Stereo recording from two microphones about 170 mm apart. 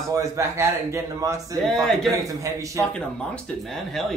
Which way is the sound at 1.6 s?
Centre (ahead or behind).